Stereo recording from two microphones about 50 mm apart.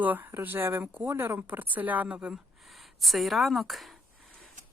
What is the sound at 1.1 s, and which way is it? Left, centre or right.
Speech, right.